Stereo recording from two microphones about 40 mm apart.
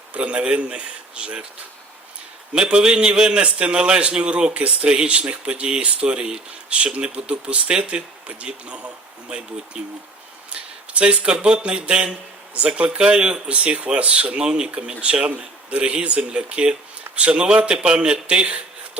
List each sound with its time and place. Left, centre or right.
0.1 s a man's voice: right
2.5 s a man's voice: right
10.5 s a sound: right
11.3 s a man's voice: right
13.0 s a man's voice: right